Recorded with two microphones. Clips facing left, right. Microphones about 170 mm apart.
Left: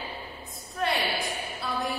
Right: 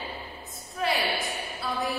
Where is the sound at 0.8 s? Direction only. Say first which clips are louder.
Even; centre (ahead or behind).